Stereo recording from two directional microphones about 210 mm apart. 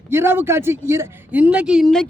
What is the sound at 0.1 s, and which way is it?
Speech, 10° right (ahead or behind).